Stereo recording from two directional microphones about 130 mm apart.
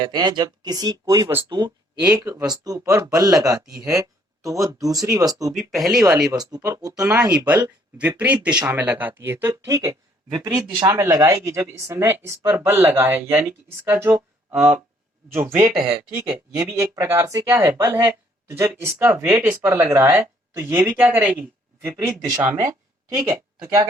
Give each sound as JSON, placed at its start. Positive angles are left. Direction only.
{"t": 0.0, "sound": "speech", "side_deg": -35}
{"t": 1.5, "sound": "speech", "side_deg": -35}
{"t": 2.0, "sound": "speech", "side_deg": -25}
{"t": 5.5, "sound": "speech", "side_deg": 0}
{"t": 6.4, "sound": "speech", "side_deg": -30}
{"t": 7.3, "sound": "speech", "side_deg": -10}
{"t": 17.0, "sound": "speech", "side_deg": -25}